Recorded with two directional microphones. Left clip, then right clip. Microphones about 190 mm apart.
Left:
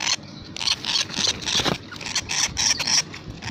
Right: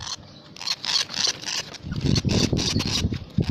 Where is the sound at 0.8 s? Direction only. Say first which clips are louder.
Left 1 dB; 35° right (ahead or behind).